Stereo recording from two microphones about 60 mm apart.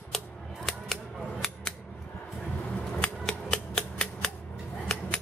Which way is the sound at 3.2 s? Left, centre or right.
Centre.